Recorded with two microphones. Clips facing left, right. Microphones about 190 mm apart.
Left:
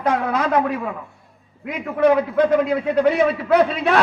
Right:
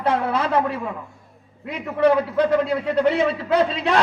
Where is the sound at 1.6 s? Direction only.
10° left (ahead or behind).